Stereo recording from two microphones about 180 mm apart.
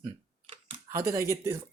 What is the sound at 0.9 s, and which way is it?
Speech, 15° right (ahead or behind).